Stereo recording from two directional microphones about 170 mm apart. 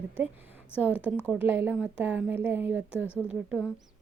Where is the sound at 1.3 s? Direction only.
10° right (ahead or behind).